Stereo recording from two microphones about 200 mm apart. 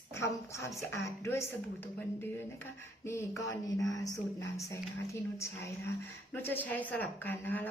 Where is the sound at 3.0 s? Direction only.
15° left (ahead or behind).